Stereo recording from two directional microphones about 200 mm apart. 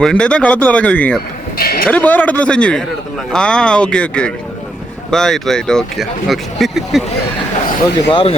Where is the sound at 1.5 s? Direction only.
50° left (ahead or behind).